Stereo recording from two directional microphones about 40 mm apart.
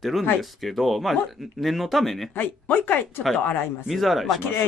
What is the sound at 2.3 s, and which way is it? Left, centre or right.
Speech, left.